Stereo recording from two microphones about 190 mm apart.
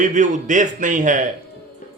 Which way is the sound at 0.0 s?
40° right (ahead or behind).